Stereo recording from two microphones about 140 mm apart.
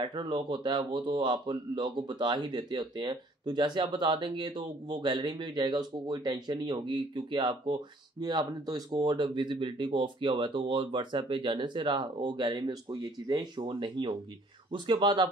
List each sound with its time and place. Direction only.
0.0 s speech: 35° right (ahead or behind)